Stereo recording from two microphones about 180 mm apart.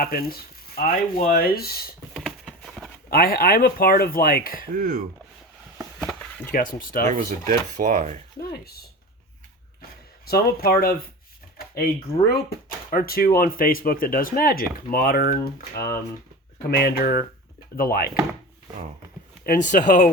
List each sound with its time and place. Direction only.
0.0 s speech: 55° left (ahead or behind)
2.1 s a sound: centre (ahead or behind)
3.1 s speech: 55° left (ahead or behind)
4.7 s speech: 55° right (ahead or behind)
6.0 s chop: 10° left (ahead or behind)
6.5 s speech: 50° left (ahead or behind)
7.1 s speech: 45° right (ahead or behind)
8.4 s speech: 60° left (ahead or behind)
10.2 s speech: 60° left (ahead or behind)
11.5 s a sound: 60° left (ahead or behind)
12.3 s speech: 55° left (ahead or behind)
16.7 s speech: 60° left (ahead or behind)
19.5 s speech: 45° left (ahead or behind)